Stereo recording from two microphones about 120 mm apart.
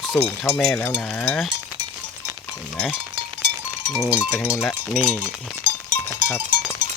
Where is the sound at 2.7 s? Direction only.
Centre (ahead or behind).